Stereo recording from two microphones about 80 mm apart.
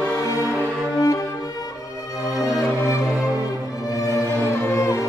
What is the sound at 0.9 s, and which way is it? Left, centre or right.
Music, left.